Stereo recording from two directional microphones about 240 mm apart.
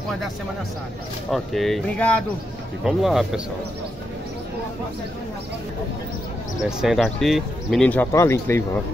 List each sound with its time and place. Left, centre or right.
1.3 s speech: centre
6.8 s speech: centre